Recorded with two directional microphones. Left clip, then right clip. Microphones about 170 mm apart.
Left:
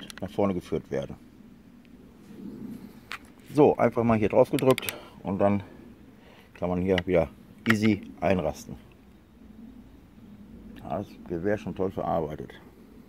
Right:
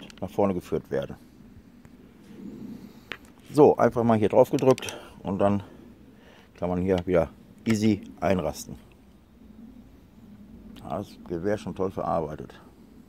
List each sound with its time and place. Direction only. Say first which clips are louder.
0.0 s speech: right 2 dB; 10° right (ahead or behind)
3.5 s speech: right 2 dB; 15° right (ahead or behind)
10.7 s speech: even; 5° right (ahead or behind)